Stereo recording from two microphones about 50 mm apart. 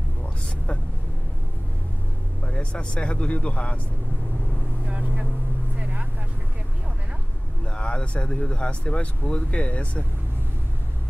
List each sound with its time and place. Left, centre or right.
2.4 s speech: left
4.8 s motorboat: right
5.8 s vehicle: right
7.6 s speech: left